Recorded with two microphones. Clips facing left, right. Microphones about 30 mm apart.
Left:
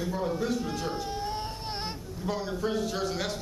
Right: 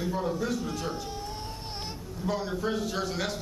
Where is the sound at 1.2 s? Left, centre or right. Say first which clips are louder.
Left 4 dB; left.